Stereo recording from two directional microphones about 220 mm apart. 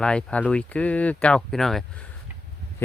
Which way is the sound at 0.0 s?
5° left (ahead or behind).